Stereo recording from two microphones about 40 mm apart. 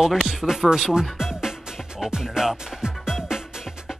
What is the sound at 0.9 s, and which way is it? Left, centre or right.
Music, centre.